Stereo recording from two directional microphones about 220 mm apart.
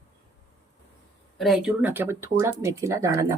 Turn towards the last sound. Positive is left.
turn(degrees=-15)  # may be behind; listen again after turning